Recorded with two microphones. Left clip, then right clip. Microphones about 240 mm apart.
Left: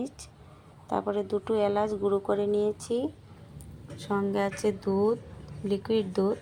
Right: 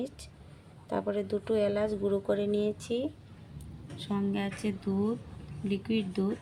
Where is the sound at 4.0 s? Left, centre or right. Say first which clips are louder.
Left 6 dB; centre.